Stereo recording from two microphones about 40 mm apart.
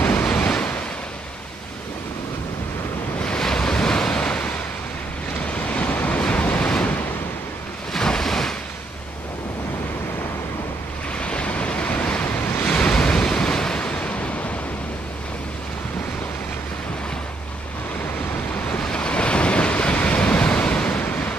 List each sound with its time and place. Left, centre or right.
0.2 s waves: left
3.3 s waves: centre
5.5 s waves: left
7.9 s waves: centre
11.1 s waves: left
18.9 s waves: left